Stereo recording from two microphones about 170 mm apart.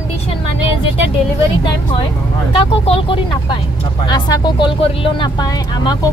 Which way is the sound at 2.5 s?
30° left (ahead or behind).